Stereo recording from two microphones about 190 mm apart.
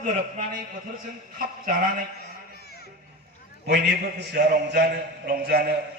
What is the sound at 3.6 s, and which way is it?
A man's voice, 60° right (ahead or behind).